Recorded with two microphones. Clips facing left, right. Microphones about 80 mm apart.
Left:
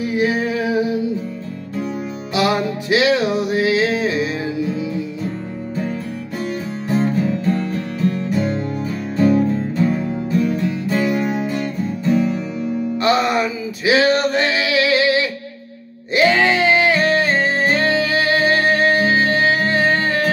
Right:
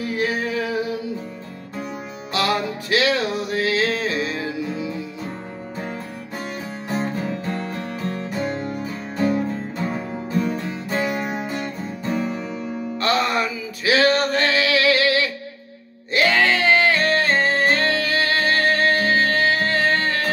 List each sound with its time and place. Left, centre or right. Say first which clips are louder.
0.0 s music: left 5 dB; centre
2.3 s music: left 4 dB; centre
7.2 s music: left 7 dB; right
11.1 s music: left 6 dB; centre
13.0 s male singing: left 3 dB; centre
16.1 s music: left 3 dB; centre